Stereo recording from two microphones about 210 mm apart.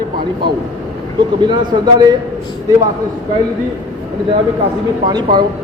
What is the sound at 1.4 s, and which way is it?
Speech, 20° right (ahead or behind).